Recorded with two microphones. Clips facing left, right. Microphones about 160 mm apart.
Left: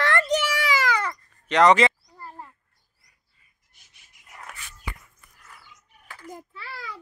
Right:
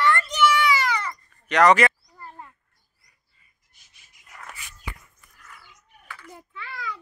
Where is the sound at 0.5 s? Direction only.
90° left.